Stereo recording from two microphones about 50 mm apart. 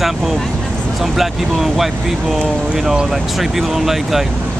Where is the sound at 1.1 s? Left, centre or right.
Centre.